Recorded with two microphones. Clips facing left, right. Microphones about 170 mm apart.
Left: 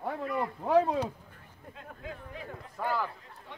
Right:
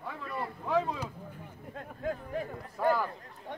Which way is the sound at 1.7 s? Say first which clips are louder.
Right 8 dB; 50° right (ahead or behind).